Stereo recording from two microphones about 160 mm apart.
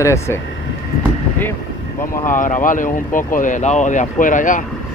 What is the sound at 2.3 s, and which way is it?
Speech, 55° left (ahead or behind).